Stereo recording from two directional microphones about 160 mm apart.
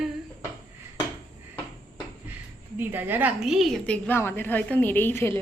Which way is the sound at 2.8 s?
10° right (ahead or behind).